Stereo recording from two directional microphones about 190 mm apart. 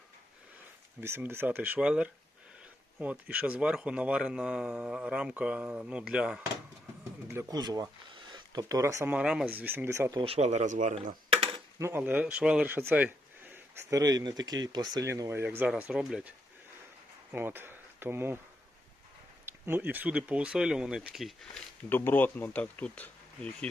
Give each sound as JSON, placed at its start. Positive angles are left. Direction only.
{"t": 1.0, "sound": "speech", "side_deg": -10}
{"t": 7.3, "sound": "speech", "side_deg": -15}
{"t": 10.2, "sound": "speech", "side_deg": -35}
{"t": 11.8, "sound": "speech", "side_deg": -10}
{"t": 17.3, "sound": "speech", "side_deg": -10}
{"t": 19.5, "sound": "speech", "side_deg": -10}
{"t": 21.8, "sound": "speech", "side_deg": 10}